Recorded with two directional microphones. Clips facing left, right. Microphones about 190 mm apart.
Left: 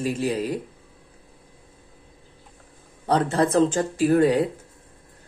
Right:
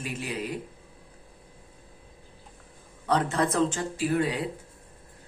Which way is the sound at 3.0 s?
35° left (ahead or behind).